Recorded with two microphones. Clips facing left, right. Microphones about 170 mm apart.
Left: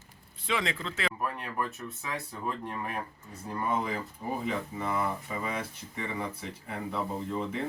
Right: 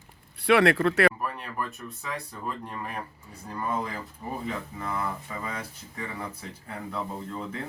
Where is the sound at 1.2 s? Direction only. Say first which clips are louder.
Even; 5° left (ahead or behind).